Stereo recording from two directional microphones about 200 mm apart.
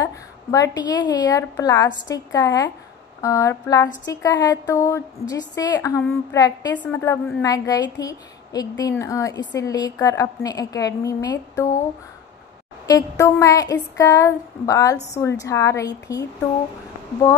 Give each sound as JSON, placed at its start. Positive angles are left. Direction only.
{"t": 0.0, "sound": "a woman's voice", "side_deg": 15}
{"t": 7.4, "sound": "a woman's voice", "side_deg": 15}
{"t": 12.8, "sound": "a woman's voice", "side_deg": 20}